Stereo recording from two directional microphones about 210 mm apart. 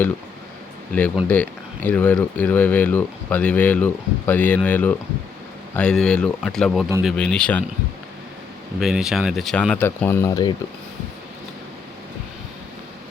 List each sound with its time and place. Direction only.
1.3 s speech: 5° left (ahead or behind)
8.8 s speech: centre (ahead or behind); by 10.5 s 15° left (ahead or behind)